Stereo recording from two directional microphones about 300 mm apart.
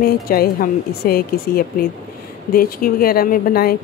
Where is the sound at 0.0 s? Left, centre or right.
Left.